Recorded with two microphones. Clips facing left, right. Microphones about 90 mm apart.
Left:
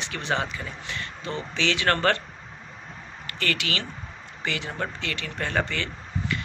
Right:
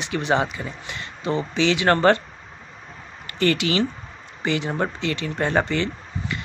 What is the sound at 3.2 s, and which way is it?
Speech, 25° right (ahead or behind).